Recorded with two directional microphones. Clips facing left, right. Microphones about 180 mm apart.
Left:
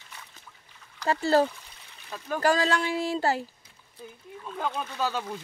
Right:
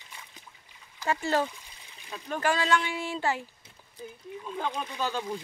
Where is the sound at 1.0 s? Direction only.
35° left (ahead or behind).